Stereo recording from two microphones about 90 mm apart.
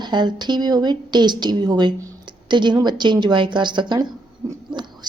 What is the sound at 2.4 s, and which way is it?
Speech, 60° right (ahead or behind).